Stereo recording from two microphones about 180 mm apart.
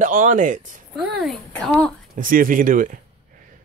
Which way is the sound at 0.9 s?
Centre (ahead or behind).